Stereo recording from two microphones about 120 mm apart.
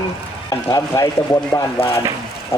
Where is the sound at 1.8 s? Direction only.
55° left (ahead or behind).